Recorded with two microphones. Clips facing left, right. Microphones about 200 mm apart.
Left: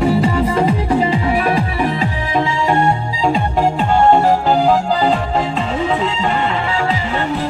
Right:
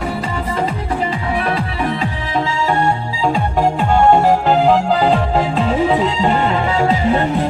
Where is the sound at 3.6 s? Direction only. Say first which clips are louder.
Right 1 dB; 10° right (ahead or behind).